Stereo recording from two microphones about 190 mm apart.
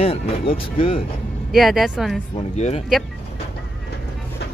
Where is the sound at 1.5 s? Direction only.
Centre (ahead or behind).